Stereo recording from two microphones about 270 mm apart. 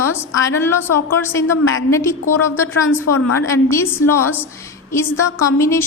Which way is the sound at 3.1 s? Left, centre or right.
Left.